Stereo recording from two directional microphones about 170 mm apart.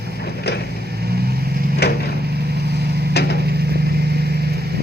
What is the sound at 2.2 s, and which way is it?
Vehicle, 70° right (ahead or behind).